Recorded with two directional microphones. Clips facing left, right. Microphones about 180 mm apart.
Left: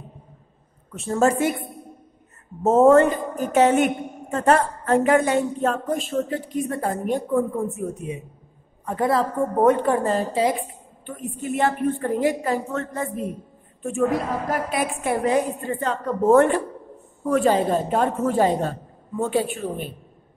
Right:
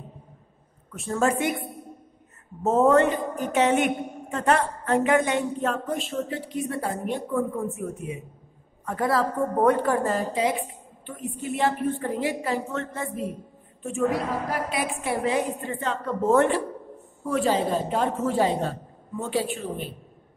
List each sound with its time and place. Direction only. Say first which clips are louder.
0.9 s a woman's voice: left 4 dB; 30° left (ahead or behind)
2.6 s a woman's voice: left 5 dB; 45° left (ahead or behind)
7.5 s a woman's voice: left 3 dB; 25° left (ahead or behind)
11.1 s a woman's voice: left 3 dB; 45° left (ahead or behind)